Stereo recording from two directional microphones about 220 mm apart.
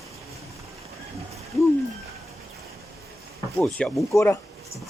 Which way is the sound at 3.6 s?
Centre (ahead or behind).